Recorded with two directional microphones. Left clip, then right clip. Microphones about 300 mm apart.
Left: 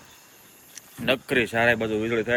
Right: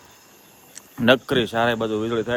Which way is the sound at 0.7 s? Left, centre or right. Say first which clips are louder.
Right 7 dB; right.